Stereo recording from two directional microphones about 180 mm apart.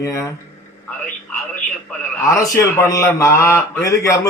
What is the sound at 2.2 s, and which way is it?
A man's voice, 15° left (ahead or behind).